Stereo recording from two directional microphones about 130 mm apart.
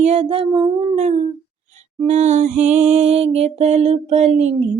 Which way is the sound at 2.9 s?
50° right (ahead or behind).